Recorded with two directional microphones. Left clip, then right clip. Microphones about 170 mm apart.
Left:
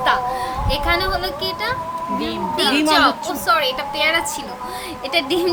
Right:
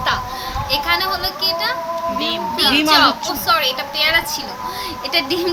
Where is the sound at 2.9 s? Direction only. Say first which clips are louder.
Right 2 dB; 50° left (ahead or behind).